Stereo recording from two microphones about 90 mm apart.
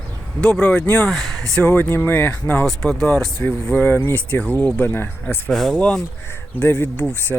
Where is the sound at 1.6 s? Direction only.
25° left (ahead or behind).